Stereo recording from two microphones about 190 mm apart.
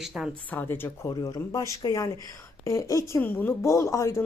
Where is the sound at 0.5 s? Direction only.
10° left (ahead or behind).